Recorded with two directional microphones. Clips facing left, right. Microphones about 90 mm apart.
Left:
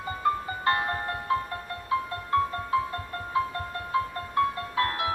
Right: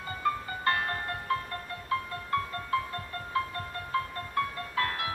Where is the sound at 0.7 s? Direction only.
20° left (ahead or behind).